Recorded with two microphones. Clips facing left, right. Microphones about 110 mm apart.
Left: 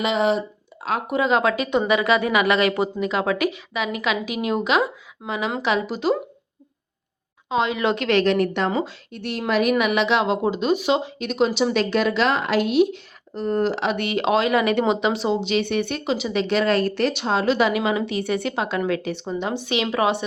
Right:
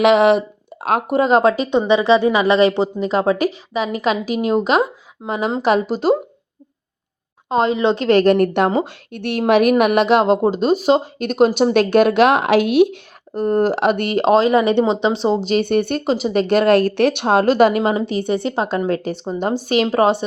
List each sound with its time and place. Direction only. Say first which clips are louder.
0.0 s speech: right 8 dB; 70° right (ahead or behind)
1.1 s a woman's voice: right 5 dB; 40° right (ahead or behind)
7.5 s a woman's voice: right 5 dB; 40° right (ahead or behind)